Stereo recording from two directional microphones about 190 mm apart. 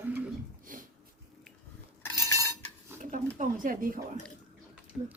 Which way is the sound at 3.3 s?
45° right (ahead or behind).